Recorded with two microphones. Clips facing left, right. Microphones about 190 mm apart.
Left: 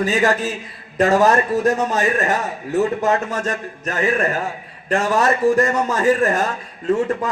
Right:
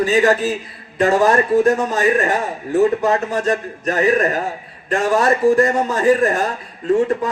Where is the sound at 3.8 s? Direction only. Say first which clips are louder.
Right 4 dB; 40° right (ahead or behind).